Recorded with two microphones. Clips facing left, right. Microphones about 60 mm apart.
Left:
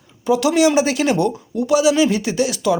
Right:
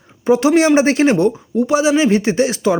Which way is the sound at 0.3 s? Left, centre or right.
Right.